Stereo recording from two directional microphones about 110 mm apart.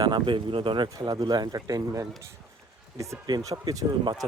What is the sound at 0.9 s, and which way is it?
Speech, 35° right (ahead or behind).